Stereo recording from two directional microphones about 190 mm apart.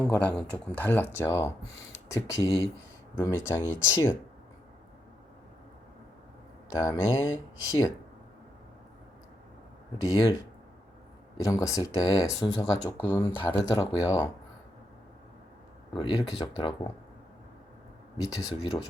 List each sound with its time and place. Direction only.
0.0 s speech: 5° left (ahead or behind)
6.7 s speech: 15° left (ahead or behind)
10.0 s speech: 20° left (ahead or behind)
11.3 s speech: 15° left (ahead or behind)
13.3 s speech: 25° left (ahead or behind)
16.0 s speech: 25° left (ahead or behind)
18.3 s speech: 20° left (ahead or behind)